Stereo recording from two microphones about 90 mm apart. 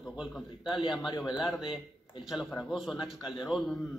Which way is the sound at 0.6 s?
65° left (ahead or behind).